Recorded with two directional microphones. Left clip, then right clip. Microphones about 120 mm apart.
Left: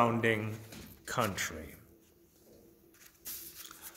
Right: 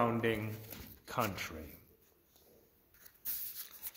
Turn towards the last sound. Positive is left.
turn(degrees=-55)  # may be behind; listen again after turning